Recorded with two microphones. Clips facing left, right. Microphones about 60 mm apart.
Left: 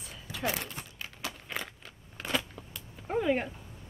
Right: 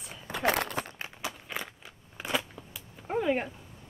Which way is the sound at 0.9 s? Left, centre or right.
Right.